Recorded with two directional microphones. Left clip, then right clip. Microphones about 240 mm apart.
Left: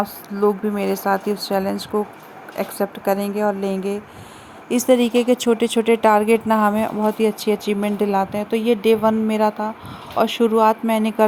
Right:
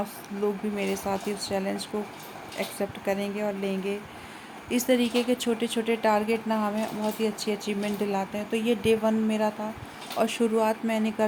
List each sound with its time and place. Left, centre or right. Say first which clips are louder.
0.0 s speech: left 10 dB; centre